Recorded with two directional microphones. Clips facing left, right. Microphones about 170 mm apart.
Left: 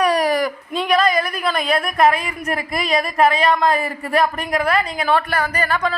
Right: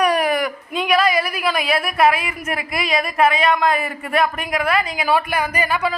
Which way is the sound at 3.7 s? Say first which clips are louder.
Left 1 dB; 35° left (ahead or behind).